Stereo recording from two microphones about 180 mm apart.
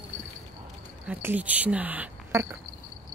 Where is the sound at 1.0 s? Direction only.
10° right (ahead or behind).